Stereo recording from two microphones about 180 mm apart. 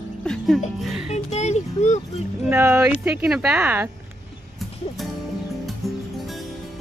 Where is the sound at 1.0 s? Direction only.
40° left (ahead or behind).